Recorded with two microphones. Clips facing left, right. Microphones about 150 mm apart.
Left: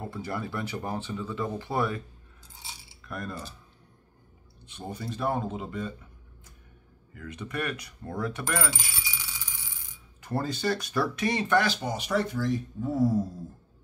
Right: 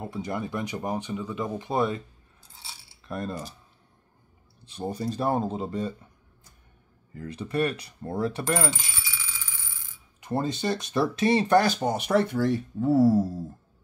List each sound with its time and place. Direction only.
0.0 s speech: 20° right (ahead or behind)
3.0 s coin: 25° right (ahead or behind)
4.6 s speech: 35° right (ahead or behind)
7.2 s speech: 30° right (ahead or behind)
8.9 s bicycle bell: 15° left (ahead or behind)
10.2 s speech: 20° right (ahead or behind); by 13.2 s 70° right (ahead or behind)